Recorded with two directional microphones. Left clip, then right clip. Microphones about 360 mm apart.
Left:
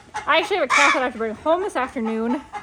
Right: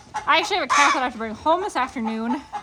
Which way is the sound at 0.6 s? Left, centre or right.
Centre.